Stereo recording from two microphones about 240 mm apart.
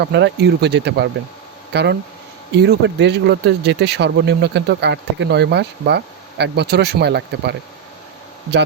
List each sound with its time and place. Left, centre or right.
0.0 s speech: right